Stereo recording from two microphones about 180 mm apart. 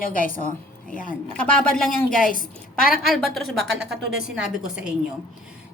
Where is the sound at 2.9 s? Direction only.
Centre (ahead or behind).